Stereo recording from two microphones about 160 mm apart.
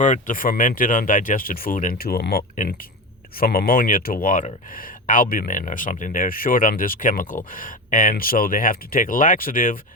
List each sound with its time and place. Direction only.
0.0 s speech: 55° left (ahead or behind); by 2.4 s 75° left (ahead or behind)
3.4 s speech: 65° left (ahead or behind)